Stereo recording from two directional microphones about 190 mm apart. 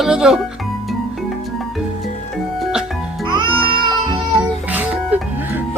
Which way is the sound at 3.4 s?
25° right (ahead or behind).